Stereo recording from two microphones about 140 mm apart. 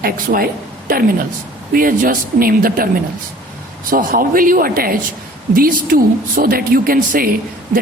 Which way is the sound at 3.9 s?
85° right.